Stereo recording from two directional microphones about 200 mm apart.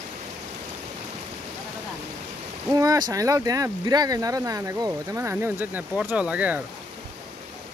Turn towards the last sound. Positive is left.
turn(degrees=-5)  # may be behind; listen again after turning